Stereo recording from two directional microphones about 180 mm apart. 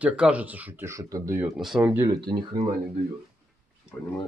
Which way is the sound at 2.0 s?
25° right (ahead or behind).